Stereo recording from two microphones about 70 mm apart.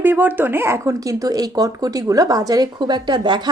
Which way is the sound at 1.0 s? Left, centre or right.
Right.